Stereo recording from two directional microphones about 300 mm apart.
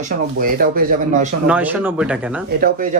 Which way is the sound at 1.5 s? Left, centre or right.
Centre.